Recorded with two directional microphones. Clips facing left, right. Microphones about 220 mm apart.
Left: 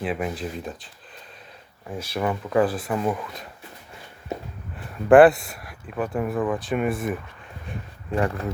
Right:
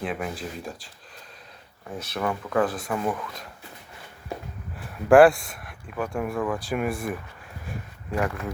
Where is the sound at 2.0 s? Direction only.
10° left (ahead or behind).